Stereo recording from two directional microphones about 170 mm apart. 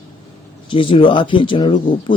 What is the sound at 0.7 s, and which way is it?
Speech, 30° left (ahead or behind).